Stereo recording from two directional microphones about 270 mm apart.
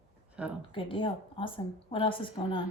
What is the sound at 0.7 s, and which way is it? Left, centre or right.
A woman's voice, centre.